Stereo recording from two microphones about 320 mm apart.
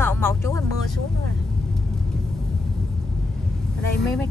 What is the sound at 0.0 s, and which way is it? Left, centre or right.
Music, centre.